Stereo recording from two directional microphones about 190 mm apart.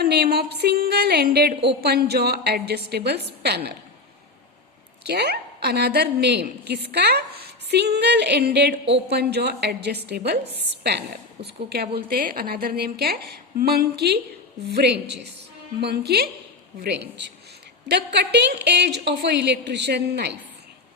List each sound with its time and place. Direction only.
0.0 s a woman's voice: 55° right (ahead or behind)
5.0 s a woman's voice: 60° right (ahead or behind)
11.4 s a woman's voice: 55° right (ahead or behind)